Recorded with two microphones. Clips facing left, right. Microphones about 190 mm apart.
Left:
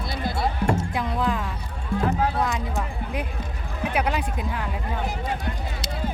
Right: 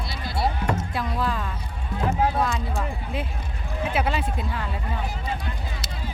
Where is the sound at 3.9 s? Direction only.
15° left (ahead or behind).